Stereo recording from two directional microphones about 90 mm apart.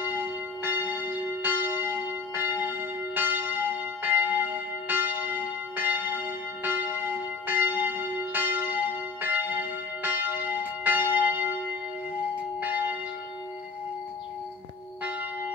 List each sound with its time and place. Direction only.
0.0 s church bell: 25° right (ahead or behind)
12.5 s church bell: 20° right (ahead or behind)